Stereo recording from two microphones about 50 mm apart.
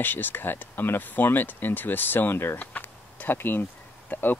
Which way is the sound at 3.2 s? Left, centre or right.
Left.